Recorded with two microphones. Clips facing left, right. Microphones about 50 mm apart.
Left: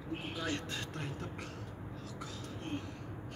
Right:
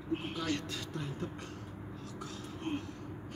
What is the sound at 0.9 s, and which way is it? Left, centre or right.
Vehicle, left.